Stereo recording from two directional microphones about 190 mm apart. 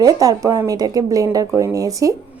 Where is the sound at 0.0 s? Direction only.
20° right (ahead or behind).